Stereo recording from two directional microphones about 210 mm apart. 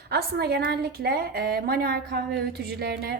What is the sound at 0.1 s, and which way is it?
A woman's voice, 50° right (ahead or behind).